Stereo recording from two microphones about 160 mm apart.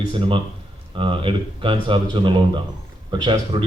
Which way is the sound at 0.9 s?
30° right (ahead or behind).